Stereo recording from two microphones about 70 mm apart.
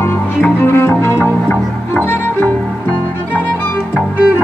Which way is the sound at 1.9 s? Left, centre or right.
Left.